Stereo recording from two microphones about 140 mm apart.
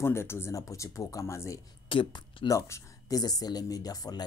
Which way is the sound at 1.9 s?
35° left (ahead or behind).